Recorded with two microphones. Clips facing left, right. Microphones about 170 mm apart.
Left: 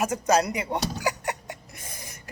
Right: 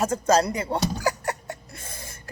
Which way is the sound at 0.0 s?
15° left (ahead or behind).